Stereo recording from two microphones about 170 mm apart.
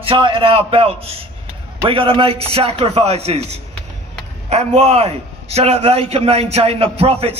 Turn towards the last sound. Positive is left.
turn(degrees=-35)  # may be behind; listen again after turning